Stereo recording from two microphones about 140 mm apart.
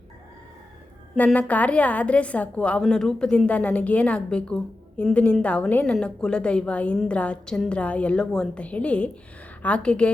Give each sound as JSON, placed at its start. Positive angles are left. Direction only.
{"t": 1.1, "sound": "a woman's voice", "side_deg": 10}